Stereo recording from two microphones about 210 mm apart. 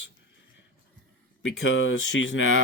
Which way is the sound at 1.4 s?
60° left (ahead or behind).